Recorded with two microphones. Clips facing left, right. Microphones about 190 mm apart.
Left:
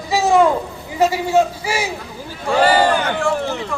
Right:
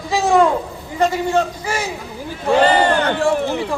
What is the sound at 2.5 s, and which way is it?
Speech, 20° right (ahead or behind).